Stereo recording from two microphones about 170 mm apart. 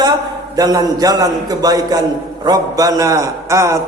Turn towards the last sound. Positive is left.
turn(degrees=-15)  # may be behind; listen again after turning